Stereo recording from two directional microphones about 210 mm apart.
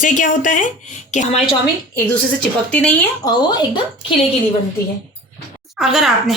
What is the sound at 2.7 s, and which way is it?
Speech, 5° left (ahead or behind).